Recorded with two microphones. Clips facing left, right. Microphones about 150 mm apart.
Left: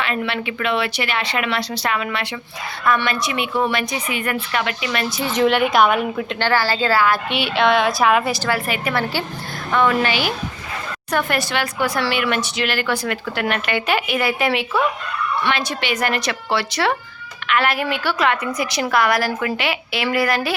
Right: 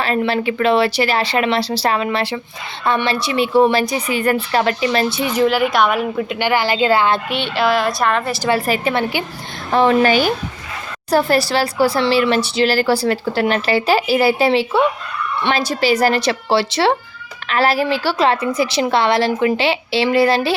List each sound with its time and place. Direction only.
0.0 s speech: 35° right (ahead or behind)
5.4 s a woman's voice: centre (ahead or behind)
6.4 s a woman's voice: 15° right (ahead or behind)
7.3 s a woman's voice: centre (ahead or behind)
8.4 s a woman's voice: 35° right (ahead or behind)
8.9 s a woman's voice: 20° right (ahead or behind)
9.7 s speech: 30° right (ahead or behind)
10.1 s speech: 45° right (ahead or behind)
11.1 s a woman's voice: 35° right (ahead or behind)